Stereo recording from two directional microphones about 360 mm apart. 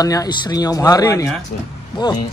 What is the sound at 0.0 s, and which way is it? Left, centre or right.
Speech, centre.